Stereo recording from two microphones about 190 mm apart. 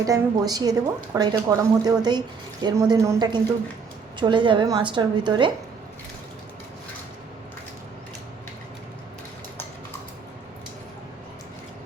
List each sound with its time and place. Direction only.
0.0 s a woman's voice: 20° right (ahead or behind)